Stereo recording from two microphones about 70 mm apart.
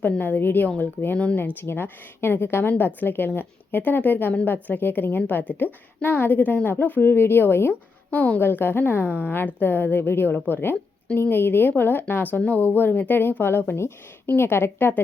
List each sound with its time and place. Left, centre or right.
0.0 s a woman's voice: left
1.4 s a woman's voice: left
7.7 s a woman's voice: left